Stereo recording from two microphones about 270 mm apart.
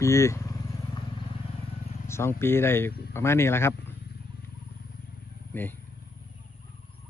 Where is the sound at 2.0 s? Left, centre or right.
Centre.